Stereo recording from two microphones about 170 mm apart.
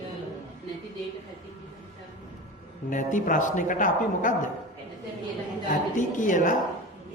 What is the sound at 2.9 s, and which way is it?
Speech, 50° left (ahead or behind).